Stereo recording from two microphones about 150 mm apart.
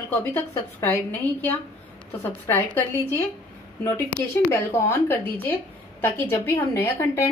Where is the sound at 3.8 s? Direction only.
20° left (ahead or behind).